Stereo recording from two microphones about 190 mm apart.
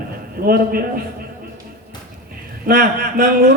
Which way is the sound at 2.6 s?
50° right (ahead or behind).